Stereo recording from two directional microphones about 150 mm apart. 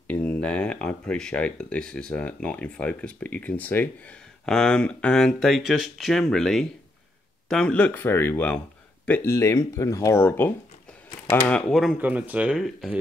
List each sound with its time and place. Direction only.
0.1 s speech: 10° left (ahead or behind)
11.7 s speech: centre (ahead or behind)